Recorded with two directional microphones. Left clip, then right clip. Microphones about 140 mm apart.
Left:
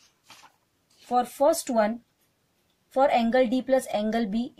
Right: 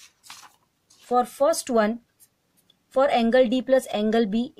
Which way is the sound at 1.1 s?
50° right (ahead or behind).